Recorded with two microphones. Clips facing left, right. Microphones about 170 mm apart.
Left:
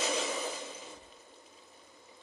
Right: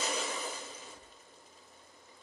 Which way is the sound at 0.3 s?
Centre (ahead or behind).